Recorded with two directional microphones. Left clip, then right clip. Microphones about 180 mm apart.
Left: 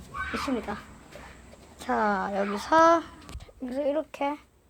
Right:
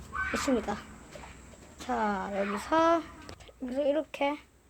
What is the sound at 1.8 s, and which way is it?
Speech, 15° left (ahead or behind).